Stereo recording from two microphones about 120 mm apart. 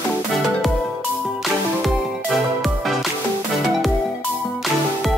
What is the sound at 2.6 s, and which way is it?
Music, centre (ahead or behind).